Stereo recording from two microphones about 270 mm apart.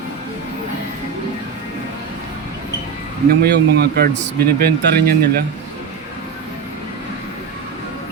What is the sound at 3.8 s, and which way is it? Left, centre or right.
Speech, right.